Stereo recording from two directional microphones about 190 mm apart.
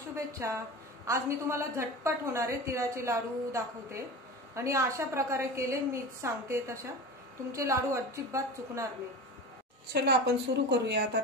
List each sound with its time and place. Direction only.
0.1 s a woman's voice: 15° right (ahead or behind)
9.9 s a woman's voice: 60° right (ahead or behind)